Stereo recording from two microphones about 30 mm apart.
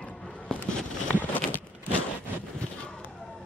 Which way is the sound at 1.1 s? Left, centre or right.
Left.